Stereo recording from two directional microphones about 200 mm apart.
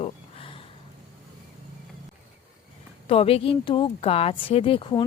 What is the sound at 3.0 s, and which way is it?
Speech, 30° left (ahead or behind).